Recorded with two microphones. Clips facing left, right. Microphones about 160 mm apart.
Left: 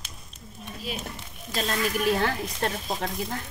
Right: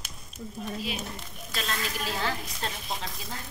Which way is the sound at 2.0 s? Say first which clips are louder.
Left 9 dB; 60° left (ahead or behind).